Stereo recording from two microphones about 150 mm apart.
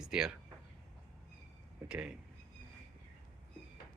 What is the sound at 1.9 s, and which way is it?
Speech, 5° right (ahead or behind).